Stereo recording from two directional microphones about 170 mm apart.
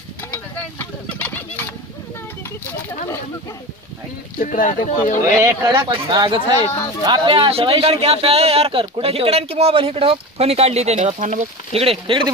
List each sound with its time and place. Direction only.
0.3 s a sound: 10° left (ahead or behind)
4.4 s speech: 50° left (ahead or behind)
5.4 s speech: 15° right (ahead or behind)
5.7 s speech: 30° right (ahead or behind)